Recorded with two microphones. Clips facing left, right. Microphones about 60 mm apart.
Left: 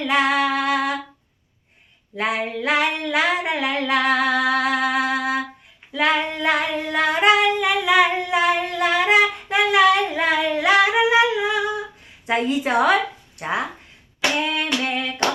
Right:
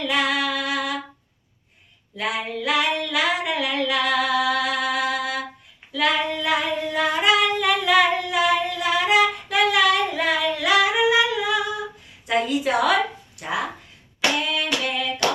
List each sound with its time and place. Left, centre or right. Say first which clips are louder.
0.0 s female singing: left 4 dB; left
2.1 s female singing: left 3 dB; left
7.6 s humming: left 1 dB; centre
12.2 s a woman's voice: left 1 dB; left
14.4 s female singing: left 2 dB; left